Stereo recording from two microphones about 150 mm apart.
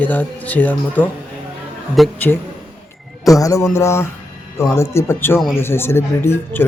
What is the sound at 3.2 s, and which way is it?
A man's voice, 20° left (ahead or behind).